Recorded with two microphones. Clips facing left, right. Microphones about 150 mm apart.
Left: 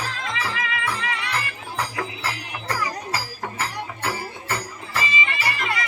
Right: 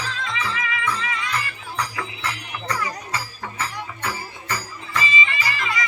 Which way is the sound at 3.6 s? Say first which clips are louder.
Even; 55° left (ahead or behind).